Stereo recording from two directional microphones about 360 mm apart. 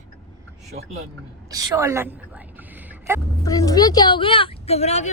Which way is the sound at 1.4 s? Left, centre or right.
Centre.